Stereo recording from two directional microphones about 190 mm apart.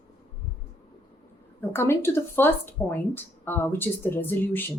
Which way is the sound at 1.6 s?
10° left (ahead or behind).